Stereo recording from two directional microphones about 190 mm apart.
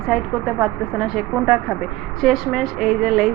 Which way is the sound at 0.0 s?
5° right (ahead or behind).